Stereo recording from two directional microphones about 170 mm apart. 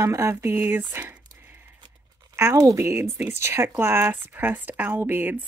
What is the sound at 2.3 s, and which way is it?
Speech, 15° right (ahead or behind).